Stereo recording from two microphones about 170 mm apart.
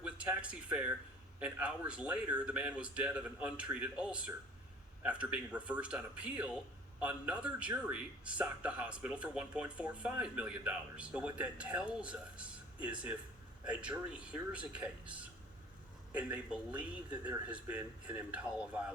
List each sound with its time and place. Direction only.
0.0 s speech: 5° right (ahead or behind)